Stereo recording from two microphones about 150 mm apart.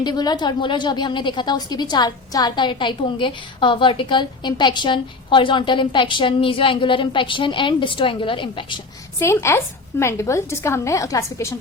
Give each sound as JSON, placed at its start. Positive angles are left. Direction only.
{"t": 0.0, "sound": "a woman's voice", "side_deg": 30}
{"t": 9.1, "sound": "a woman's voice", "side_deg": 20}